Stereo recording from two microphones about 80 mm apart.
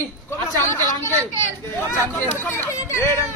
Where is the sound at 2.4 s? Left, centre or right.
Left.